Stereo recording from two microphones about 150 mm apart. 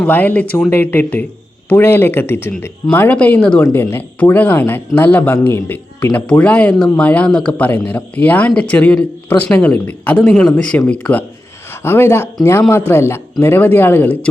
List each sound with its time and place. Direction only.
0.0 s speech: 10° left (ahead or behind)